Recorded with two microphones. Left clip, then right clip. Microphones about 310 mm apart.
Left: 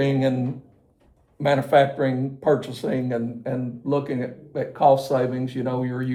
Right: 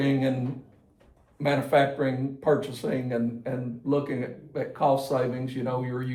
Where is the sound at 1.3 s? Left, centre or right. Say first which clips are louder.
Left 5 dB; left.